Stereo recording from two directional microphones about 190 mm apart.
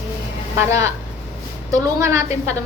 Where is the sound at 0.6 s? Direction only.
15° right (ahead or behind).